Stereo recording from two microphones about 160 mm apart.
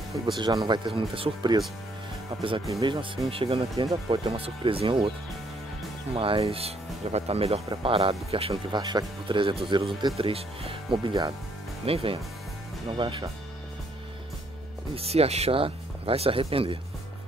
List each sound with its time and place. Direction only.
0.1 s speech: 30° right (ahead or behind)
2.7 s speech: 30° right (ahead or behind)
3.7 s speech: 25° right (ahead or behind)
4.2 s speech: 35° right (ahead or behind)
6.1 s speech: 35° right (ahead or behind)
15.0 s speech: 40° right (ahead or behind)